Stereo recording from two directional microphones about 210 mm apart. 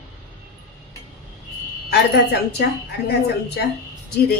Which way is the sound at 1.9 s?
50° left (ahead or behind).